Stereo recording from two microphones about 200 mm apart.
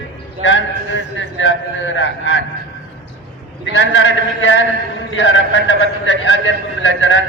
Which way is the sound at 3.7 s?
70° left (ahead or behind).